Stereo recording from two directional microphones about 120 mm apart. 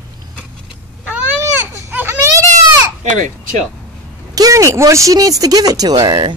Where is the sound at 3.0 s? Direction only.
90° right.